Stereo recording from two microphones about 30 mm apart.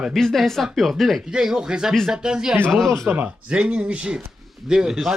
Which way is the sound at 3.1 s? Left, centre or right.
Right.